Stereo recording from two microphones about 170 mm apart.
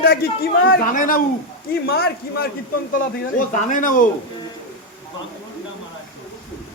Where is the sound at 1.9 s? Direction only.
65° left (ahead or behind).